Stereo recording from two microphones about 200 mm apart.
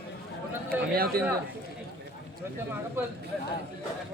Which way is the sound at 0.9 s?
50° right (ahead or behind).